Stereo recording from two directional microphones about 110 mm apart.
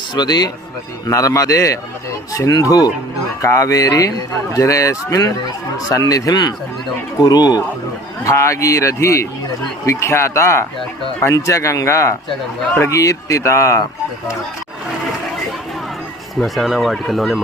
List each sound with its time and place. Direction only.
0.1 s speech: 40° left (ahead or behind)
8.2 s speech: 25° left (ahead or behind)
16.3 s speech: centre (ahead or behind)